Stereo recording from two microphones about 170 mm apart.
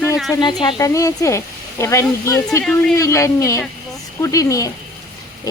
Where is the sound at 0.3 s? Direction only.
25° left (ahead or behind).